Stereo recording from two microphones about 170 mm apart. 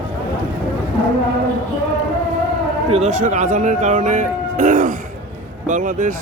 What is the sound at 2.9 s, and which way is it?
Speech, 40° right (ahead or behind).